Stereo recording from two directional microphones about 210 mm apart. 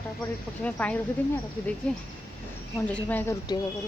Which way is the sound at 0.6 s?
5° left (ahead or behind).